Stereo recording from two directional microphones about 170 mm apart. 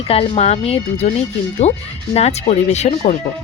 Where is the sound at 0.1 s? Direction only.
35° left (ahead or behind).